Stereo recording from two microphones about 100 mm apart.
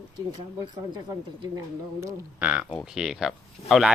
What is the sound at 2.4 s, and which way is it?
Speech, 10° right (ahead or behind).